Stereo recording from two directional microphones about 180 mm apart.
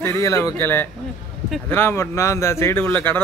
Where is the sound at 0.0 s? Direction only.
15° left (ahead or behind).